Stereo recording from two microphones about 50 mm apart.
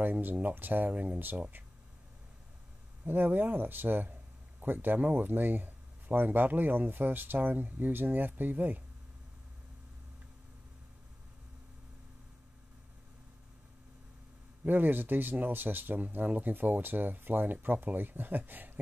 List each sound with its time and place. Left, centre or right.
0.0 s speech: right
3.1 s speech: right
14.6 s speech: right